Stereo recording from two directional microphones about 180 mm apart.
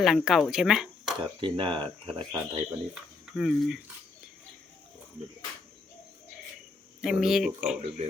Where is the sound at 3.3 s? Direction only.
Centre (ahead or behind).